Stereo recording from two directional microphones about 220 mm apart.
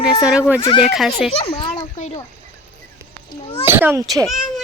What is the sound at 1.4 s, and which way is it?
Speech, 25° left (ahead or behind).